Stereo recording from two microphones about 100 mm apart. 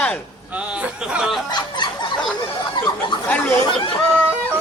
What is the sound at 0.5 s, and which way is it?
Speech, 10° right (ahead or behind).